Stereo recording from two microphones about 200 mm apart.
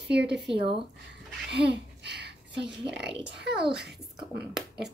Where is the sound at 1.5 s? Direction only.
55° right (ahead or behind).